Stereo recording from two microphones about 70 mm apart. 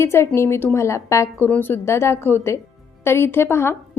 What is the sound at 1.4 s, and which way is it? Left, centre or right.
A woman's voice, left.